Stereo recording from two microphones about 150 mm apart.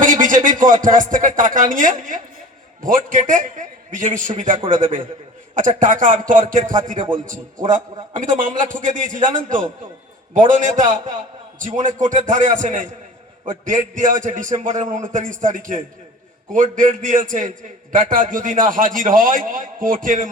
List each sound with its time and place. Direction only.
0.0 s a man's voice: 60° right (ahead or behind)